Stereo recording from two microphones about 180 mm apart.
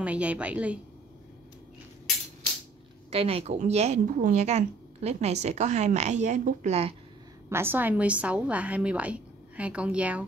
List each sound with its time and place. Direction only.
0.0 s a woman's voice: 5° right (ahead or behind)
3.1 s a woman's voice: 35° right (ahead or behind)
7.4 s a woman's voice: 15° right (ahead or behind)